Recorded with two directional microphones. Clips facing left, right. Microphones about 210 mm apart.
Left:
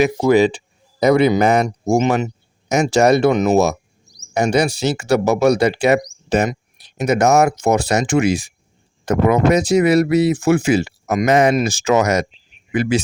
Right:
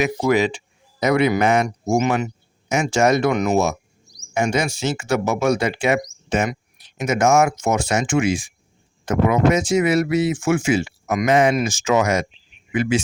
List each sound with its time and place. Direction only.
0.0 s speech: 30° left (ahead or behind)
3.3 s speech: 20° left (ahead or behind)
4.4 s speech: 35° left (ahead or behind)